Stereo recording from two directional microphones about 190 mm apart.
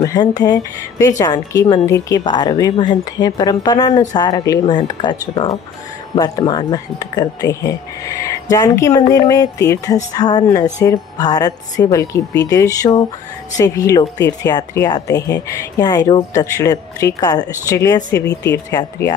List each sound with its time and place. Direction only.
0.0 s speech: 20° left (ahead or behind)
18.2 s speech: 60° left (ahead or behind)
18.7 s speech: 20° left (ahead or behind)